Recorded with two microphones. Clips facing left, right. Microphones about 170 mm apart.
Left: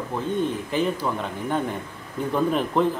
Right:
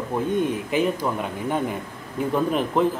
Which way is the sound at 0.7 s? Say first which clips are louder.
Right 2 dB; 10° right (ahead or behind).